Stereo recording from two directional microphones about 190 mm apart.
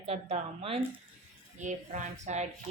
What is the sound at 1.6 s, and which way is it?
Speech, 40° right (ahead or behind).